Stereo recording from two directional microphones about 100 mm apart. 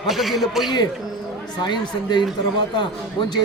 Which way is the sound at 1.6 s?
50° left (ahead or behind).